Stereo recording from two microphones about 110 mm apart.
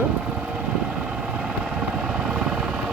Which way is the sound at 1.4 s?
5° right (ahead or behind).